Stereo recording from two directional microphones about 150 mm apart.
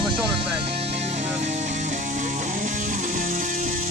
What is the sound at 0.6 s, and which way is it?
Music, 40° right (ahead or behind).